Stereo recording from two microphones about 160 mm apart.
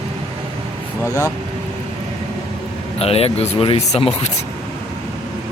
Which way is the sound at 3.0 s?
40° left (ahead or behind).